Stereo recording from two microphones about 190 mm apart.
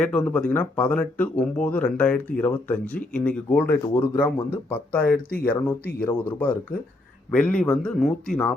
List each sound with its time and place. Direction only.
0.0 s speech: 5° left (ahead or behind)
5.0 s speech: 50° left (ahead or behind)
6.0 s a man's voice: 10° left (ahead or behind)